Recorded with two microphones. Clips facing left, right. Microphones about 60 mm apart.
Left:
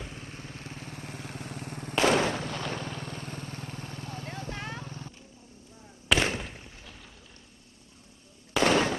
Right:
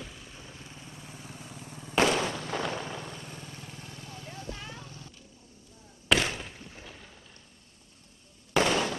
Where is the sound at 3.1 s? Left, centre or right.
Left.